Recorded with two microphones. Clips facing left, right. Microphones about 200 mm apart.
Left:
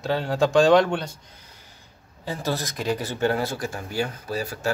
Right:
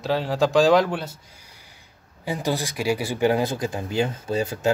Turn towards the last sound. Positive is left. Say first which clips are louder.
# right 4 dB
turn(degrees=-20)  # may be behind; listen again after turning